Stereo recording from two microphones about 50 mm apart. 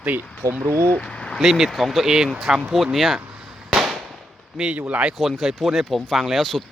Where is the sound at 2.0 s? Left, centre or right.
Centre.